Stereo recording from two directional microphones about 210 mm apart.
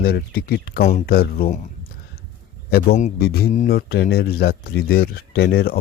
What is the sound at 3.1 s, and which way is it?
Speech, 45° left (ahead or behind).